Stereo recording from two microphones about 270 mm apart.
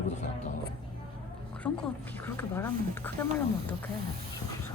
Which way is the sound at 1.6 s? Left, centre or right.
Centre.